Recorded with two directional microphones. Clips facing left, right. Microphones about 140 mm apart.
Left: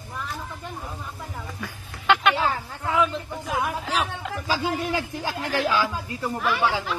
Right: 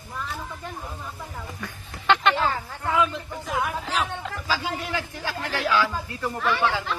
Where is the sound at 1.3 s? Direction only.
5° left (ahead or behind).